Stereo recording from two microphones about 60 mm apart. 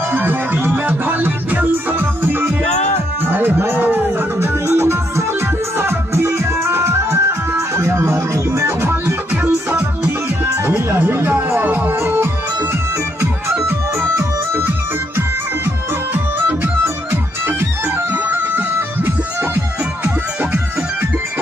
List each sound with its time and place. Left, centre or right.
0.1 s music: right
4.6 s music: right
9.0 s music: right
11.0 s music: right
13.7 s music: right